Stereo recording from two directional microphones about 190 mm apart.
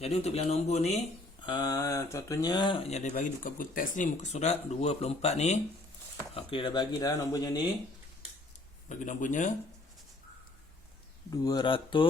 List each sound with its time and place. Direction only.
0.0 s speech: 35° left (ahead or behind)
1.5 s speech: 20° left (ahead or behind)
8.9 s speech: 40° left (ahead or behind)
11.3 s speech: 20° left (ahead or behind)